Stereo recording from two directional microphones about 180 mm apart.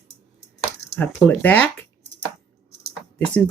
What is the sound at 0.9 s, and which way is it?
Speech, 10° left (ahead or behind).